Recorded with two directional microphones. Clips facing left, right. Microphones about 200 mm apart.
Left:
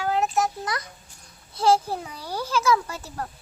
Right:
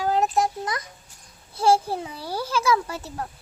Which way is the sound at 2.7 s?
25° right (ahead or behind).